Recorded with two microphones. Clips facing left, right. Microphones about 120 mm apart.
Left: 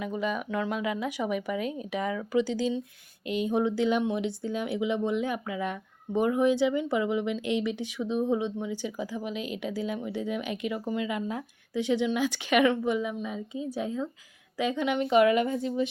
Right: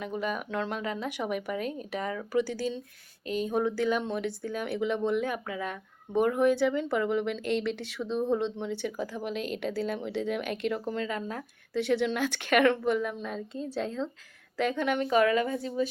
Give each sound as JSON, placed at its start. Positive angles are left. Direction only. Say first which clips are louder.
{"t": 0.0, "sound": "speech", "louder": "left 2 dB", "side_deg": 5}
{"t": 3.2, "sound": "speech", "louder": "left 2 dB", "side_deg": -40}
{"t": 3.5, "sound": "speech", "louder": "left 2 dB", "side_deg": 20}
{"t": 10.1, "sound": "speech", "louder": "right 1 dB", "side_deg": -70}
{"t": 10.6, "sound": "speech", "louder": "even", "side_deg": 10}